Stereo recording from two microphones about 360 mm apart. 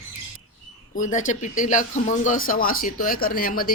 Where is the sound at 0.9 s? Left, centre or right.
Left.